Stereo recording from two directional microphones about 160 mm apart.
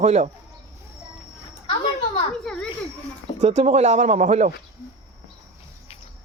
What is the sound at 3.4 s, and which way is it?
Speech, 45° right (ahead or behind).